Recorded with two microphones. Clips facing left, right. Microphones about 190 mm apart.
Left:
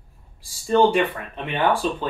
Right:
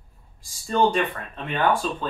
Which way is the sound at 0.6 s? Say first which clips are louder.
Left 4 dB; 15° left (ahead or behind).